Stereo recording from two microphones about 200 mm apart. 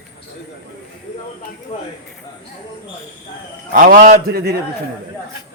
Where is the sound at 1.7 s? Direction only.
30° left (ahead or behind).